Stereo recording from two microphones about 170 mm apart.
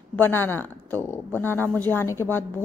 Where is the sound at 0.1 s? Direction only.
10° left (ahead or behind).